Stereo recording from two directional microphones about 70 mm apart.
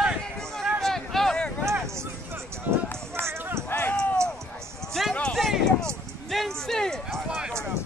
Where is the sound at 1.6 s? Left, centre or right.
Right.